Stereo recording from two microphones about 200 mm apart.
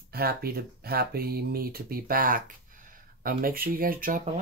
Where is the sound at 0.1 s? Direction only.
50° right (ahead or behind).